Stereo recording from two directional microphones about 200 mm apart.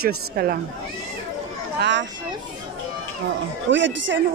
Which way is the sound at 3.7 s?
65° right (ahead or behind).